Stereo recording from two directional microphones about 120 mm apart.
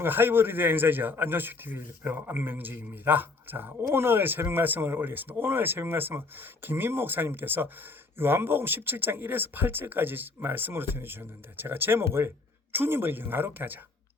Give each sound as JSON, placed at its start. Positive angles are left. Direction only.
{"t": 0.0, "sound": "a man's voice", "side_deg": -15}